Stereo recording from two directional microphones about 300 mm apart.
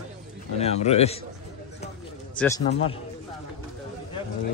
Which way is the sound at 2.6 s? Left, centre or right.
Centre.